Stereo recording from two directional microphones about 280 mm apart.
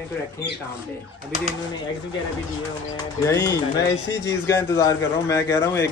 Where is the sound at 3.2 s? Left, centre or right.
Centre.